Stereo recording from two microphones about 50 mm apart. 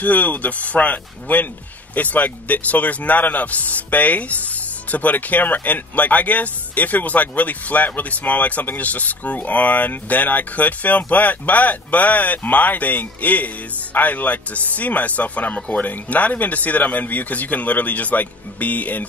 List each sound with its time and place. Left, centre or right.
0.0 s speech: left